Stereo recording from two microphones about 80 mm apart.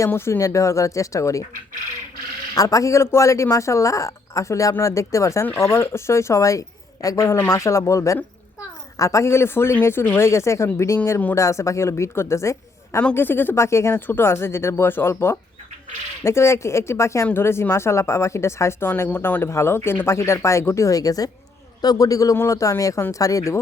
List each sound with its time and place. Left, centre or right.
0.1 s speech: left
2.6 s speech: left
7.3 s speech: left
13.1 s a man's voice: left